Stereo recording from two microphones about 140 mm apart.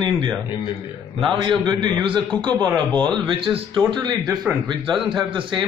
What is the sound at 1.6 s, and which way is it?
Speech, 35° right (ahead or behind).